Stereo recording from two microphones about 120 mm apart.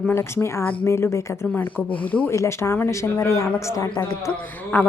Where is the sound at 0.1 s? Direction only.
20° left (ahead or behind).